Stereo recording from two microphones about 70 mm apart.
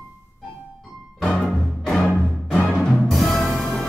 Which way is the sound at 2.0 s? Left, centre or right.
Centre.